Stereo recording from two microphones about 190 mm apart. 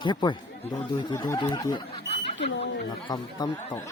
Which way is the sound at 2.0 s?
35° left (ahead or behind).